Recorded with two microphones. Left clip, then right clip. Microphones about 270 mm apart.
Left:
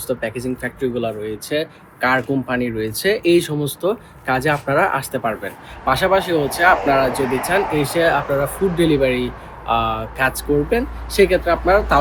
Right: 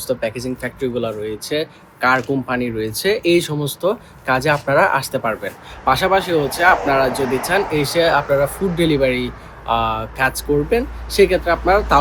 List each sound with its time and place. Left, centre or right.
0.1 s speech: centre
7.2 s speech: left
7.4 s speech: centre